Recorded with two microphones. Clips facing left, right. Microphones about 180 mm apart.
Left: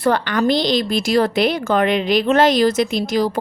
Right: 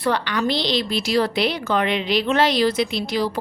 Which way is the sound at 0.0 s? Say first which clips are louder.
Left 4 dB; 50° left (ahead or behind).